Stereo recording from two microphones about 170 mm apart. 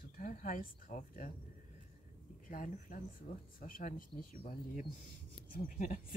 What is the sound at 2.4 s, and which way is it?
Speech, 55° left (ahead or behind).